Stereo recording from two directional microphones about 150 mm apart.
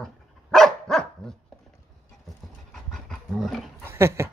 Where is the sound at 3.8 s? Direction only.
15° right (ahead or behind).